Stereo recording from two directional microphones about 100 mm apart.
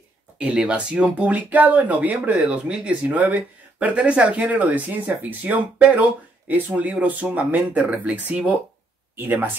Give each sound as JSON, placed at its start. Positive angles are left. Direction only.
{"t": 0.4, "sound": "speech", "side_deg": -10}